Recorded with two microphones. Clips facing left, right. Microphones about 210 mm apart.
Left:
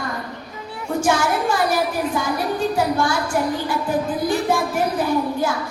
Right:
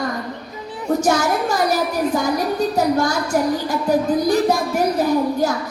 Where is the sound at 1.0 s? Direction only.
40° right (ahead or behind).